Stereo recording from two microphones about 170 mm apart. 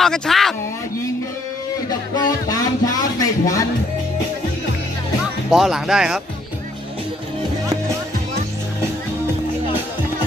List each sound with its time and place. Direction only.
0.0 s a sound: centre (ahead or behind)
1.9 s music: 25° left (ahead or behind)
5.2 s speech: centre (ahead or behind)